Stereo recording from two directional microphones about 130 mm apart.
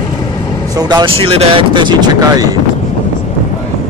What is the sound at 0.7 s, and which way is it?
Speech, 30° right (ahead or behind).